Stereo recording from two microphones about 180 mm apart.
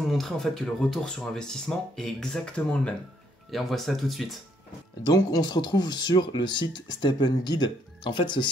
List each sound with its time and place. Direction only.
0.1 s speech: centre (ahead or behind)
5.0 s speech: 20° left (ahead or behind)